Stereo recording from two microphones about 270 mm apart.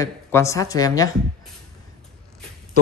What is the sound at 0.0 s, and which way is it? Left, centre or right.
A woman's voice, centre.